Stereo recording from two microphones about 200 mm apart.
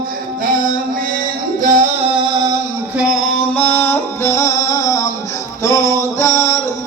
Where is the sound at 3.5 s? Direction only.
10° left (ahead or behind).